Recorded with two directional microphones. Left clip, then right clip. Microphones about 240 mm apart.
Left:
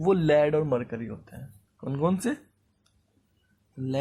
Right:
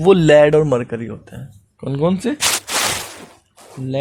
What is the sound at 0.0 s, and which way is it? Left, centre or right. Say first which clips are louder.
Speech: right 12 dB; right.